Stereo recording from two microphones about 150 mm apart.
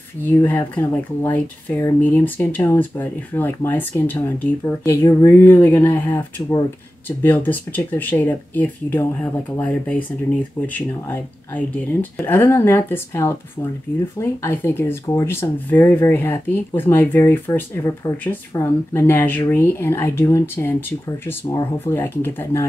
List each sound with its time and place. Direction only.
0.2 s speech: 15° left (ahead or behind)
21.7 s speech: 15° left (ahead or behind)